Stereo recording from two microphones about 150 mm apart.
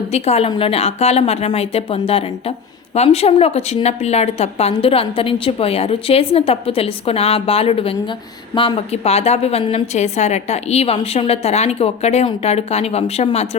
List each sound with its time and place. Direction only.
0.1 s a woman's voice: 45° left (ahead or behind)